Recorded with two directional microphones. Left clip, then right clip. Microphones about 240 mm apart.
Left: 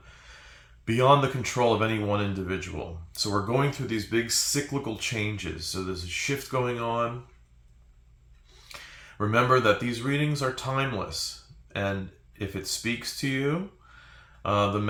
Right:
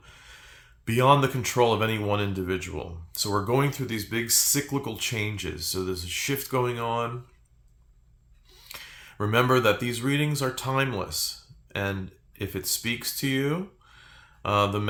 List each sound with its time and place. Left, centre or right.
0.0 s speech: right
8.6 s speech: right